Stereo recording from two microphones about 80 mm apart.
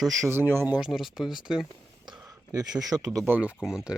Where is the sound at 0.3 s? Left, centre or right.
Right.